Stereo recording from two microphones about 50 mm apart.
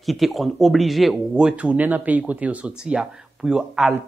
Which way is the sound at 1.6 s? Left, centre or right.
Right.